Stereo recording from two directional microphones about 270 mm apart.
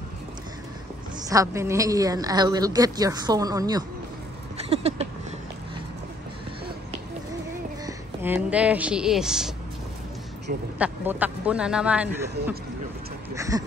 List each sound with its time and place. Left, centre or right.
1.3 s a woman's voice: centre
4.6 s a sound: right
7.8 s speech: centre
10.8 s a man's voice: centre
13.3 s a woman's voice: centre